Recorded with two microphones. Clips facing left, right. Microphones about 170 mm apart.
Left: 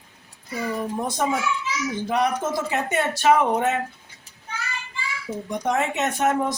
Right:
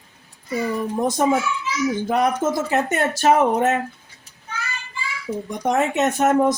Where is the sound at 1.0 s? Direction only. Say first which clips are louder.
Right 6 dB; 45° right (ahead or behind).